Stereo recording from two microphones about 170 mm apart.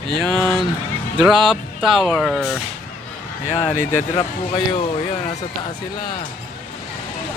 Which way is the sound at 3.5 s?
40° left (ahead or behind).